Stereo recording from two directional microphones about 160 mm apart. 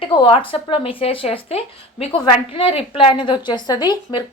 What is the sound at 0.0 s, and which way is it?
Speech, 30° left (ahead or behind).